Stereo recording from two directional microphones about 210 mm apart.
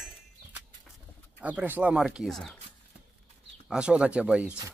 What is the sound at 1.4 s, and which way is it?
Speech, 5° right (ahead or behind).